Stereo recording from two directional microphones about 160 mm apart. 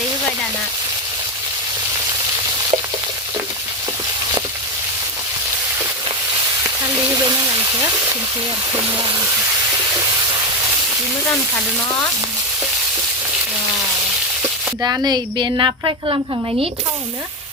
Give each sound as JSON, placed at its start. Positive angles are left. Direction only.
{"t": 7.1, "sound": "a sound", "side_deg": -25}
{"t": 8.7, "sound": "a woman's voice", "side_deg": -25}
{"t": 14.8, "sound": "a woman's voice", "side_deg": -20}